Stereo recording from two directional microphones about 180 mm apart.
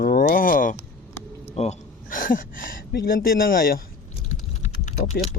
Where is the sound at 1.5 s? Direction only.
35° left (ahead or behind); by 3.8 s 55° left (ahead or behind).